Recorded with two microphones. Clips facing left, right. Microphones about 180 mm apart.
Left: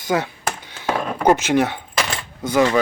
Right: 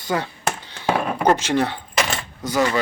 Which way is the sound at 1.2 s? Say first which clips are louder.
Left 4 dB; 15° left (ahead or behind).